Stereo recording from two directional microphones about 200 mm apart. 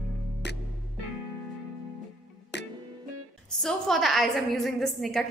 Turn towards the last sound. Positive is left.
turn(degrees=0)  # may be behind; listen again after turning